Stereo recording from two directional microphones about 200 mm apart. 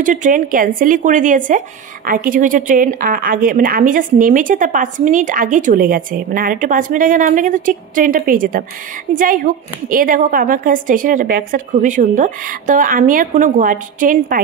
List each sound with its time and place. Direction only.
0.0 s speech: 40° right (ahead or behind)